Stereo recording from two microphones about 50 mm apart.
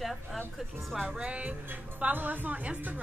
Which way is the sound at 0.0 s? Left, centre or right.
Centre.